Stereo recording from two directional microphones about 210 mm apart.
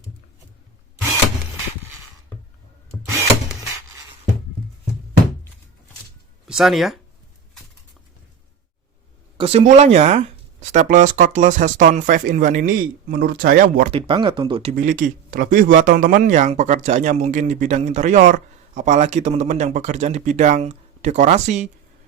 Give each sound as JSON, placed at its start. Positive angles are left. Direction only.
{"t": 6.5, "sound": "speech", "side_deg": 0}
{"t": 9.4, "sound": "speech", "side_deg": -30}
{"t": 13.9, "sound": "speech", "side_deg": -25}
{"t": 14.8, "sound": "speech", "side_deg": -40}